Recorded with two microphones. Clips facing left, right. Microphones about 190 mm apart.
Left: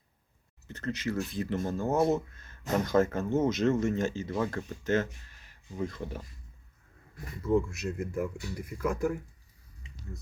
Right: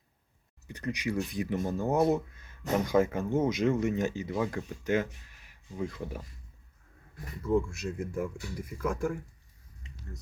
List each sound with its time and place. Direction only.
0.7 s speech: 15° right (ahead or behind)
7.4 s speech: centre (ahead or behind)